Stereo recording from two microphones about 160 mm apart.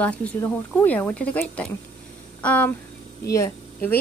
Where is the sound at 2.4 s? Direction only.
10° left (ahead or behind).